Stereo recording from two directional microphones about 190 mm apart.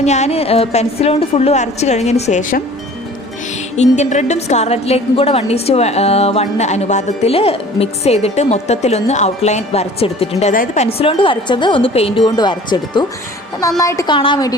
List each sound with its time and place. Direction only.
0.0 s a woman's voice: 35° left (ahead or behind)
3.8 s a woman's voice: 35° left (ahead or behind)
10.5 s a woman's voice: 45° left (ahead or behind)
10.8 s a woman's voice: 30° left (ahead or behind)